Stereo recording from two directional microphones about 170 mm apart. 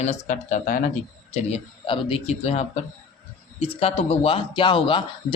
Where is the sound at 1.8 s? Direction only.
30° left (ahead or behind).